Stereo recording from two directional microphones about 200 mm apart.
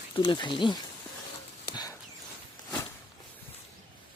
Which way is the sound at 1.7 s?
20° left (ahead or behind).